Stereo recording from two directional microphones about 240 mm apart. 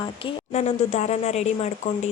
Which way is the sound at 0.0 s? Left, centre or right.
Left.